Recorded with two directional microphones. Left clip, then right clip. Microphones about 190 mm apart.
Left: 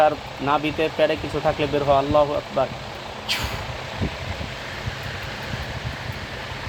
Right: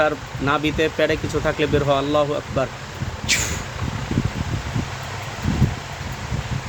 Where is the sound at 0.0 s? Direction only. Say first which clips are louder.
Left 1 dB; 40° right (ahead or behind).